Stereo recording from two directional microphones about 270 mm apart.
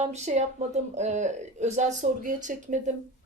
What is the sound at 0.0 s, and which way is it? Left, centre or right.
Speech, right.